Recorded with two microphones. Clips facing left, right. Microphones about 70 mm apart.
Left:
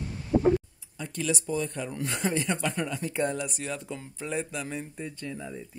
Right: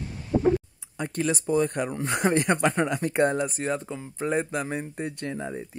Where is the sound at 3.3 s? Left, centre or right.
Right.